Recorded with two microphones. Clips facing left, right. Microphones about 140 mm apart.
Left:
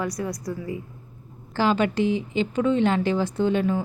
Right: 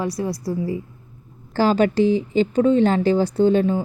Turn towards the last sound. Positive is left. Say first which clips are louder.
# right 5 dB
turn(degrees=-35)  # may be behind; listen again after turning